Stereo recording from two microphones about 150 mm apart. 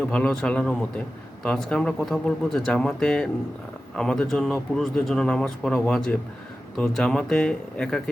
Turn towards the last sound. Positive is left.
turn(degrees=5)  # may be behind; listen again after turning